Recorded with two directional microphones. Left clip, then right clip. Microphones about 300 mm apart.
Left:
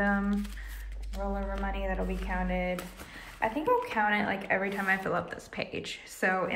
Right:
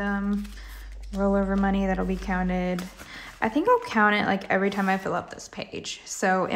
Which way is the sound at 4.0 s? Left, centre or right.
Centre.